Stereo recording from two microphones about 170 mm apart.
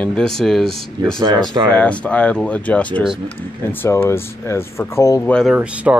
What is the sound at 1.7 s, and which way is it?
Speech, 5° left (ahead or behind).